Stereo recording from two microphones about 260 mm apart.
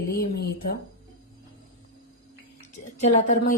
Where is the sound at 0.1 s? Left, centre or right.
Left.